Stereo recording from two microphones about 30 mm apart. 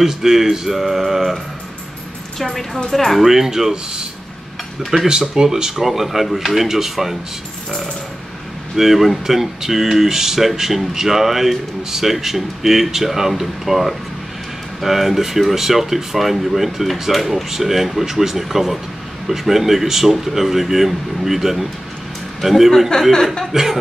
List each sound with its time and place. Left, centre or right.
0.0 s speech: centre
2.3 s a woman's voice: centre
3.2 s speech: centre
4.9 s speech: right
8.7 s a man's voice: centre
22.9 s speech: left
23.5 s speech: centre